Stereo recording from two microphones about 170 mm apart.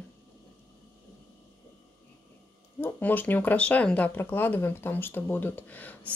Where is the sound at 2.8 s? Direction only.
10° left (ahead or behind).